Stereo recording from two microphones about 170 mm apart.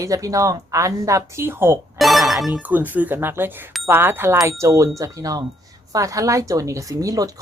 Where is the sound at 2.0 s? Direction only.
Centre (ahead or behind).